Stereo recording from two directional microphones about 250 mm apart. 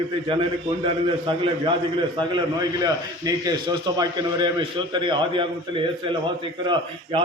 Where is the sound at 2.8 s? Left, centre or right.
Centre.